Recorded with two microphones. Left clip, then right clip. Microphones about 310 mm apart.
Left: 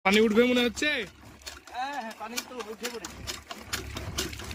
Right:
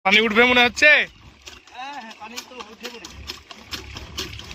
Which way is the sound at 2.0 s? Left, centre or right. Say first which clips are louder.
Even; centre.